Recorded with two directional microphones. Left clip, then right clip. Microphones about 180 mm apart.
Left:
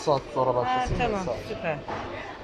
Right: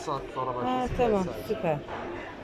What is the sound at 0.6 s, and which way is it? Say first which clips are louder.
A woman's voice: even; 25° right (ahead or behind).